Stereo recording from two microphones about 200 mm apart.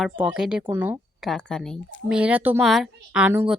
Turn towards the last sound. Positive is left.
turn(degrees=-10)  # may be behind; listen again after turning